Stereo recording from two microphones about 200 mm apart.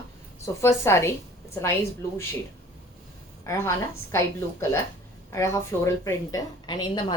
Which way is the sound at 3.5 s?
15° left (ahead or behind).